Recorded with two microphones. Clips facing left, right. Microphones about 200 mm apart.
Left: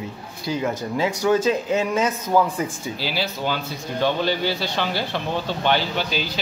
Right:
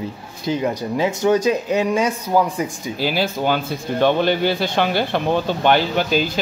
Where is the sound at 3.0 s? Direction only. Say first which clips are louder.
Right 7 dB; 50° right (ahead or behind).